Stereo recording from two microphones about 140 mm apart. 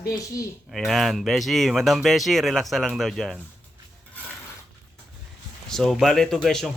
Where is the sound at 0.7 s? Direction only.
Centre (ahead or behind).